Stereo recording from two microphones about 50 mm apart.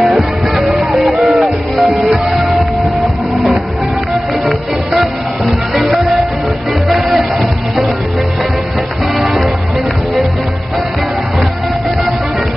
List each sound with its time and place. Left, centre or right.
0.6 s music: centre
4.1 s music: centre
9.2 s music: centre